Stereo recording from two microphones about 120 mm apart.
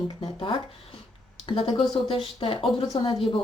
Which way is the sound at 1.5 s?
40° left (ahead or behind).